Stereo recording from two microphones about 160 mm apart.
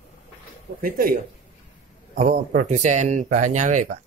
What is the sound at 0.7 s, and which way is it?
Speech, 65° right (ahead or behind).